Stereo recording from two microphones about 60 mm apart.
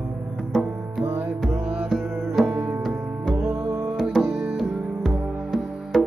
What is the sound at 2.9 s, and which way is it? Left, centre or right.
Music, centre.